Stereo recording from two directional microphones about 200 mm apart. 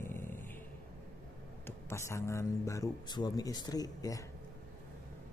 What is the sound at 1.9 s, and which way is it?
A man's voice, 15° left (ahead or behind).